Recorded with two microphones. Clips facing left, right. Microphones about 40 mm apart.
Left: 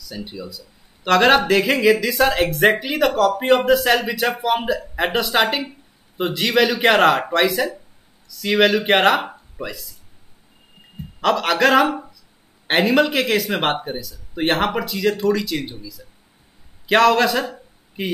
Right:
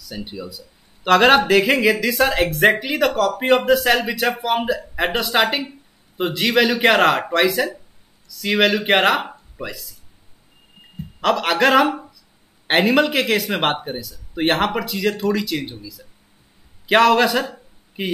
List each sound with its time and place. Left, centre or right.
0.1 s speech: centre
1.0 s speech: centre
11.1 s speech: centre
16.8 s a man's voice: centre